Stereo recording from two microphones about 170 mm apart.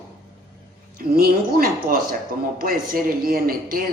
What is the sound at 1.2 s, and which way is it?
A man's voice, 60° right (ahead or behind).